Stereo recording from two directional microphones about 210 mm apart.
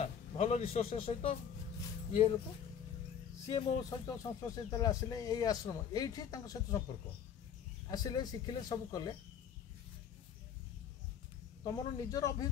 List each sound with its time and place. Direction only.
0.0 s a man's voice: 30° left (ahead or behind)
3.4 s speech: 20° left (ahead or behind)
7.9 s speech: 20° left (ahead or behind)
11.6 s speech: 15° left (ahead or behind)